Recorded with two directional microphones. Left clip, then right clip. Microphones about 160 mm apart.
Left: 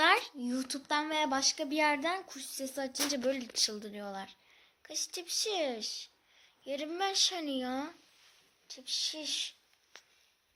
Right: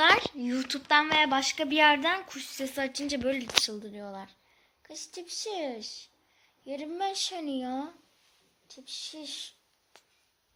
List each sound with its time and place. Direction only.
0.0 s a woman's voice: 20° left (ahead or behind)
1.4 s a woman's voice: 10° left (ahead or behind)
9.9 s a sound: centre (ahead or behind)